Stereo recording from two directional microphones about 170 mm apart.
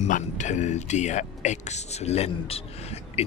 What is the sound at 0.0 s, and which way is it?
Speech, 45° left (ahead or behind).